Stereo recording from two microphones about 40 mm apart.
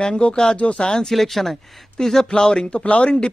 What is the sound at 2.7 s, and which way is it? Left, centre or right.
Speech, left.